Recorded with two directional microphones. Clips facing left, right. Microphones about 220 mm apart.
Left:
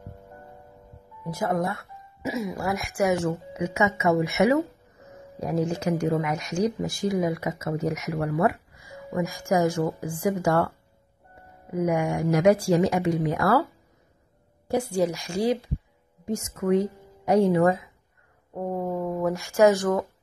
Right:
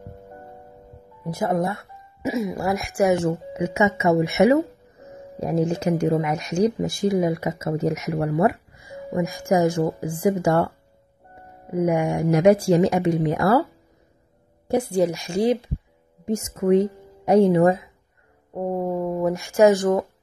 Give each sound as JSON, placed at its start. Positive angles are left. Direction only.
{"t": 1.2, "sound": "speech", "side_deg": -20}
{"t": 11.7, "sound": "speech", "side_deg": -25}
{"t": 14.7, "sound": "a woman's voice", "side_deg": -20}